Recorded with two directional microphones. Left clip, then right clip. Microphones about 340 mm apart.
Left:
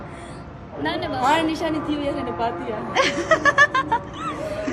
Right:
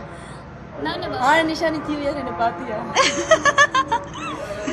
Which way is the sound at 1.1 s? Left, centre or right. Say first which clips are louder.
Right 3 dB; centre.